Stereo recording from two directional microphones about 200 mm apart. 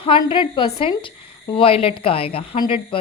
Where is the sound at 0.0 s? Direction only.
25° left (ahead or behind).